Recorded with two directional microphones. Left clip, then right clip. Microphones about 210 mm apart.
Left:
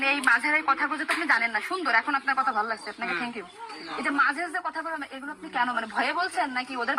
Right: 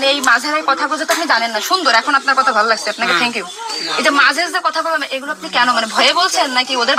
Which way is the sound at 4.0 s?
30° right (ahead or behind).